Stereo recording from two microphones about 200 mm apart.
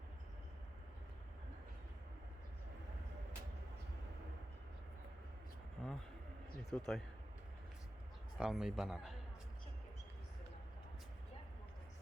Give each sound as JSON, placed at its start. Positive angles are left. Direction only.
{"t": 5.8, "sound": "a sound", "side_deg": 0}
{"t": 6.7, "sound": "speech", "side_deg": 0}
{"t": 8.4, "sound": "speech", "side_deg": 0}